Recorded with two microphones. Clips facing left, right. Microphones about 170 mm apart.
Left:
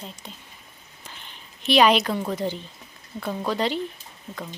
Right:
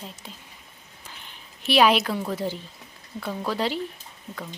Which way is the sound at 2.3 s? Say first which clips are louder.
Left 1 dB; 5° right (ahead or behind).